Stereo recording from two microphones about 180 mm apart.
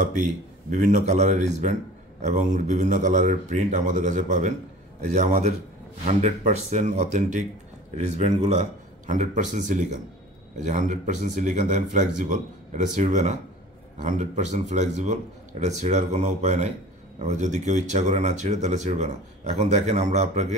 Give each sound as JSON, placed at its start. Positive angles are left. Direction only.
{"t": 0.0, "sound": "speech", "side_deg": -45}